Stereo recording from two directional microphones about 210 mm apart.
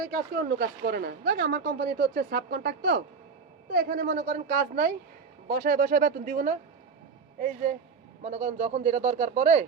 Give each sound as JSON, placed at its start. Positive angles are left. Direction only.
{"t": 0.0, "sound": "a woman's voice", "side_deg": -45}